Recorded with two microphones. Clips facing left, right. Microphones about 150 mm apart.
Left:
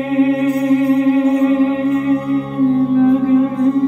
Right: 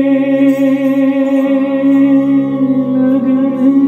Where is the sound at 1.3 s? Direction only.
30° right (ahead or behind).